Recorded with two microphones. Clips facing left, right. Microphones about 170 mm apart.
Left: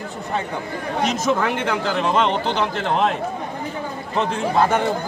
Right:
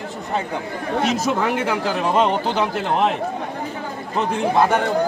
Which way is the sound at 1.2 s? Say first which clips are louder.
Even; 5° right (ahead or behind).